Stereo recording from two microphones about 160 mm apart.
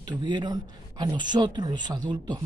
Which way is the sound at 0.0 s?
25° right (ahead or behind).